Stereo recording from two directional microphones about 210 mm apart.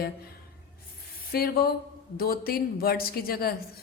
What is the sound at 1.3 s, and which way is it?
Speech, 45° left (ahead or behind).